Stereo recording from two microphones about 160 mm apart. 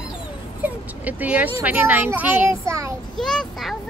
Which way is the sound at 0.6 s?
10° right (ahead or behind).